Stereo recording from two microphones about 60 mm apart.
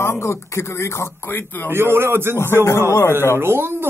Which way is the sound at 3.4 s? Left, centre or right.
Right.